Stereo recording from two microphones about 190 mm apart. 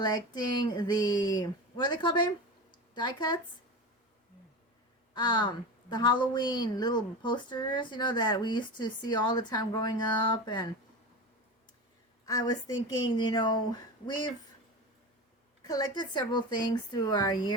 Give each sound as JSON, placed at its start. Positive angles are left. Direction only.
{"t": 0.0, "sound": "a woman's voice", "side_deg": 20}
{"t": 5.1, "sound": "a woman's voice", "side_deg": 25}
{"t": 12.2, "sound": "a woman's voice", "side_deg": 20}
{"t": 15.6, "sound": "a woman's voice", "side_deg": 20}